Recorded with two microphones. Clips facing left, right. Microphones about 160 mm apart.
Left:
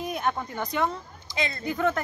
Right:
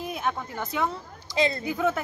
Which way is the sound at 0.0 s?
Centre (ahead or behind).